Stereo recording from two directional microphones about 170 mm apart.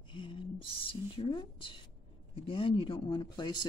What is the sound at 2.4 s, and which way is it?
Speech, 30° left (ahead or behind).